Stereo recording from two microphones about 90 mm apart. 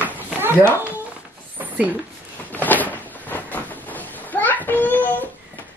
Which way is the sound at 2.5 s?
20° left (ahead or behind).